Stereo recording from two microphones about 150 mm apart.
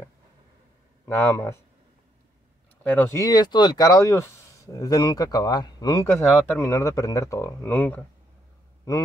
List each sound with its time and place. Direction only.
1.0 s speech: 15° left (ahead or behind)
2.8 s speech: 15° left (ahead or behind)